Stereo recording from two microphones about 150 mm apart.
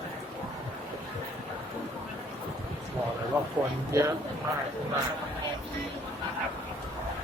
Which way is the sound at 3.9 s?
20° right (ahead or behind).